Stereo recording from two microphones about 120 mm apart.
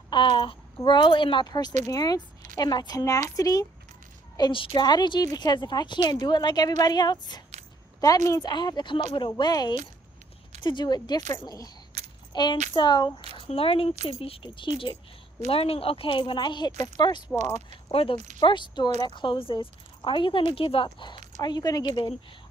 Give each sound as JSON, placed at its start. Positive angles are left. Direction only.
{"t": 0.1, "sound": "a woman's voice", "side_deg": 40}
{"t": 4.4, "sound": "a woman's voice", "side_deg": 45}
{"t": 12.0, "sound": "keys jangling", "side_deg": -65}
{"t": 12.3, "sound": "a woman's voice", "side_deg": 40}
{"t": 13.3, "sound": "a woman's voice", "side_deg": 50}
{"t": 17.4, "sound": "speech", "side_deg": -70}
{"t": 18.4, "sound": "a woman's voice", "side_deg": 40}